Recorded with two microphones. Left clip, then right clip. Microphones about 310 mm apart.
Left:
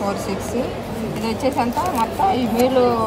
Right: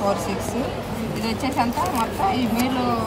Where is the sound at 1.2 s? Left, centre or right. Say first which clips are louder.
Left 3 dB; right.